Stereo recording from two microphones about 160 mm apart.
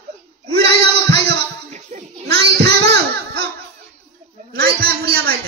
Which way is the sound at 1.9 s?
50° right (ahead or behind).